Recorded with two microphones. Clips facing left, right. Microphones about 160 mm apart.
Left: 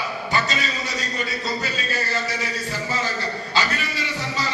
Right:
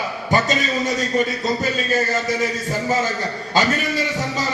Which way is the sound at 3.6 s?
45° right (ahead or behind).